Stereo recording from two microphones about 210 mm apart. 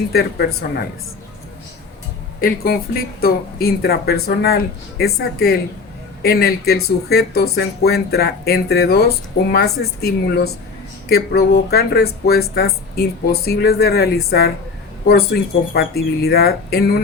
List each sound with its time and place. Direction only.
0.1 s speech: 50° left (ahead or behind)
2.4 s speech: 45° left (ahead or behind)